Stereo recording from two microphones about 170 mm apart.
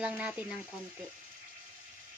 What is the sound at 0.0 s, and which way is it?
Speech, 5° right (ahead or behind).